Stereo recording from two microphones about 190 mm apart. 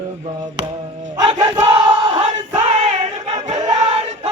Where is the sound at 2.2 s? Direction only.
35° right (ahead or behind).